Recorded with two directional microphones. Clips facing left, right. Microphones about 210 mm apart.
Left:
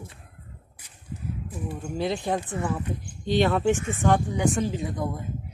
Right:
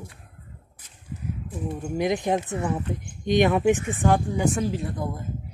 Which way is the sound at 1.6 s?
15° right (ahead or behind).